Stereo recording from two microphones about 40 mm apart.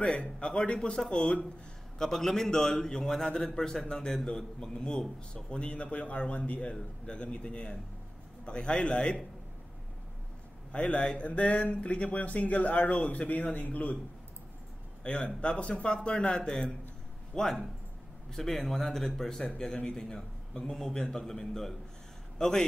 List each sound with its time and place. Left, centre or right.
0.0 s a man's voice: left
2.0 s a man's voice: centre
10.7 s speech: left
15.0 s a man's voice: left; by 22.7 s centre